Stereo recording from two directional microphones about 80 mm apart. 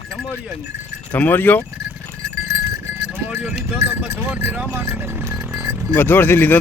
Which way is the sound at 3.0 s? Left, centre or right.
Centre.